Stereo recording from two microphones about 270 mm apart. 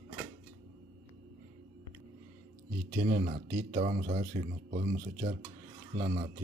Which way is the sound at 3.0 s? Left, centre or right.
Right.